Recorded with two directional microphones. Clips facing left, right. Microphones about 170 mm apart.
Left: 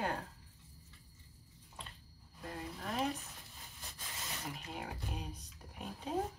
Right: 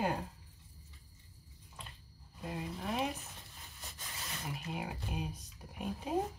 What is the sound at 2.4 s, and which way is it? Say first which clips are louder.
Speech: right 3 dB; 10° right (ahead or behind).